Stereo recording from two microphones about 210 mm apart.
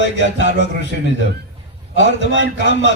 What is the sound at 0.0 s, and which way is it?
Speech, 60° left (ahead or behind).